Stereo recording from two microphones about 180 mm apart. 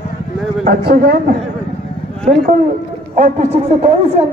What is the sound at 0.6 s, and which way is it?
Speech, 60° right (ahead or behind).